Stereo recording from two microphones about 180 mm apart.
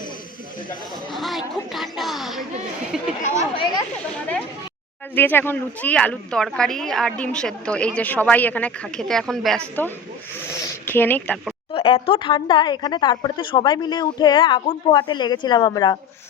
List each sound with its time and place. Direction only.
1.1 s a sound: centre (ahead or behind)
2.9 s chatter: 5° right (ahead or behind)
3.5 s speech: 25° left (ahead or behind)
5.1 s speech: 10° left (ahead or behind)
11.7 s speech: 30° left (ahead or behind)